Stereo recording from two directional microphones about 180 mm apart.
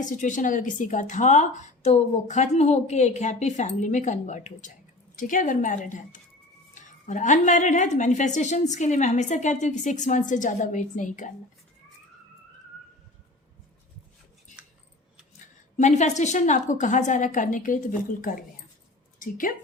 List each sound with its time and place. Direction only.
0.0 s a woman's voice: 45° left (ahead or behind)
15.8 s a woman's voice: 40° left (ahead or behind)